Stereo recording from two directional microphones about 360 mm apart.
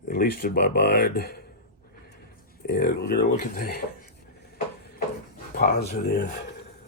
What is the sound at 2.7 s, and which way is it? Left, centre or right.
Speech, left.